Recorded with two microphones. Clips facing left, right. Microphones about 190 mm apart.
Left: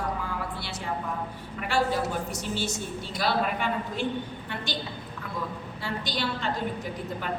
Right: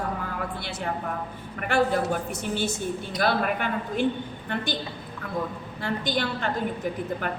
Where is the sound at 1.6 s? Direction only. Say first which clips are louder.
Right 3 dB; 55° right (ahead or behind).